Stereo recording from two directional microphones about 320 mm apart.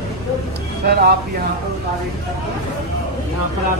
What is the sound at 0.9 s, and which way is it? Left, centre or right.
Speech, right.